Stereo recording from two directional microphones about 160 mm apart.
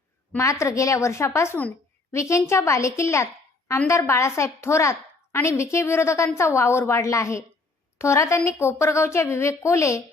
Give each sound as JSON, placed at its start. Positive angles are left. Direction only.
{"t": 0.3, "sound": "a woman's voice", "side_deg": 20}